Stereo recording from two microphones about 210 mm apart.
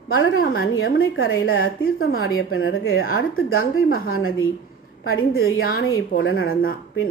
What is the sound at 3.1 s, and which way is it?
Speech, 75° left (ahead or behind).